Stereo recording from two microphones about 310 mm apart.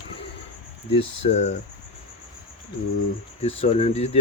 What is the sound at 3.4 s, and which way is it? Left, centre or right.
Speech, centre.